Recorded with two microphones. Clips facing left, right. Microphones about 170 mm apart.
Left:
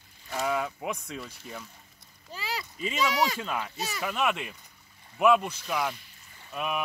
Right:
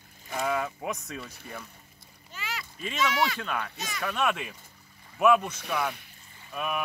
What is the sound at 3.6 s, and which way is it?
Speech, 10° left (ahead or behind).